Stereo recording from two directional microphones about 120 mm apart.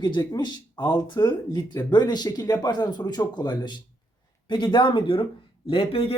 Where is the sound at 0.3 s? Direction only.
40° left (ahead or behind).